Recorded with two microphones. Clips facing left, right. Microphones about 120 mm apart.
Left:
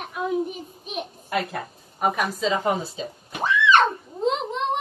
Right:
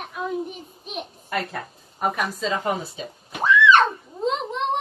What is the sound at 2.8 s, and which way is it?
Speech, 30° left (ahead or behind).